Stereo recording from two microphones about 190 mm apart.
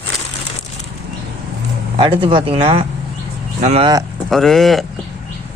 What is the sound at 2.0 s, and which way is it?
Speech, 25° right (ahead or behind).